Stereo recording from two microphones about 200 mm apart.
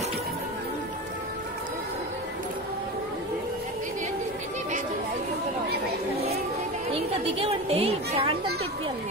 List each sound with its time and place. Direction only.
6.9 s a woman's voice: 30° right (ahead or behind)